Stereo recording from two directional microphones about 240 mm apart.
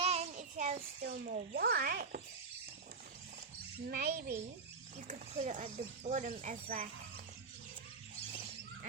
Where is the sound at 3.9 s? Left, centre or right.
Right.